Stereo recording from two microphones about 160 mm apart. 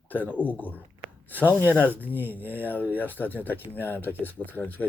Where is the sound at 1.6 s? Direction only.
10° right (ahead or behind).